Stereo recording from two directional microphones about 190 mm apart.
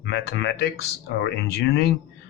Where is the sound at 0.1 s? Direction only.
65° left (ahead or behind).